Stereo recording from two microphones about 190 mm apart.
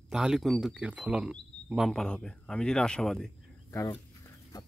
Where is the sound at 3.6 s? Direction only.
15° left (ahead or behind).